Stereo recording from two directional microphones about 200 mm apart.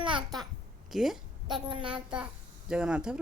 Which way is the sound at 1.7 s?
25° right (ahead or behind).